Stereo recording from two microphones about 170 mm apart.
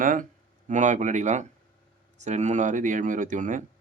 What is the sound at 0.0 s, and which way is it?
Speech, 50° right (ahead or behind).